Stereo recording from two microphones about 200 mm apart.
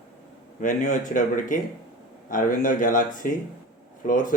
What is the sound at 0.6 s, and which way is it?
Speech, 40° left (ahead or behind).